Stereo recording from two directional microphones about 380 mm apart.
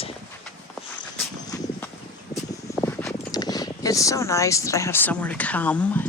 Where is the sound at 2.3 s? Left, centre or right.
Centre.